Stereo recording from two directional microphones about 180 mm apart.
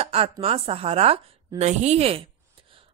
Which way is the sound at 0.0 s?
35° right (ahead or behind).